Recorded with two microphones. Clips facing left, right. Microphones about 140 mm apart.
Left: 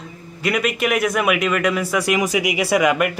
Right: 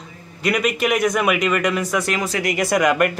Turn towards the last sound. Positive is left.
turn(degrees=5)  # may be behind; listen again after turning